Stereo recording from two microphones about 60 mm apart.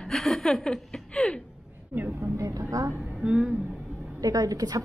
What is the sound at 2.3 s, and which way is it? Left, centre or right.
Speech, right.